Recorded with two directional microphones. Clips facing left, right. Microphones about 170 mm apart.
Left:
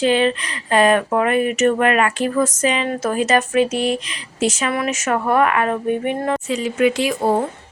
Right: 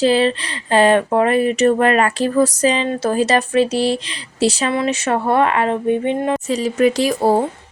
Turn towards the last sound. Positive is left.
turn(degrees=-35)  # may be behind; listen again after turning